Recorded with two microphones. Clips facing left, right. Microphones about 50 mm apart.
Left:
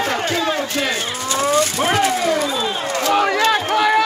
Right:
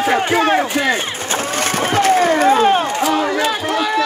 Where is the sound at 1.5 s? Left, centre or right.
Right.